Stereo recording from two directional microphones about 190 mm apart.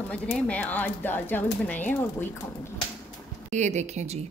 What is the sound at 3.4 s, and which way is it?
Speech, 40° right (ahead or behind).